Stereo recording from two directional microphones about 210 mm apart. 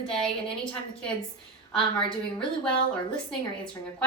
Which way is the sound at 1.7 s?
25° left (ahead or behind).